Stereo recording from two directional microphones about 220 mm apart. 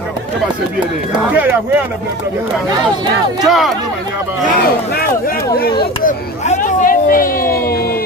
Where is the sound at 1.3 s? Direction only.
10° right (ahead or behind).